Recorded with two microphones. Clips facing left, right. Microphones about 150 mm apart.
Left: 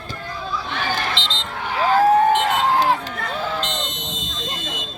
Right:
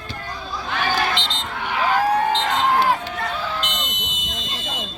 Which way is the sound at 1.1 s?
30° left (ahead or behind).